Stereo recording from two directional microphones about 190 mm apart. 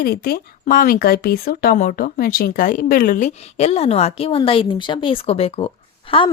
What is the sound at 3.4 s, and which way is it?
A woman's voice, 35° left (ahead or behind).